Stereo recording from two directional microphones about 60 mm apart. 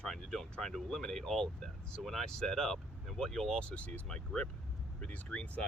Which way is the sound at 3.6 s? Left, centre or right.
Left.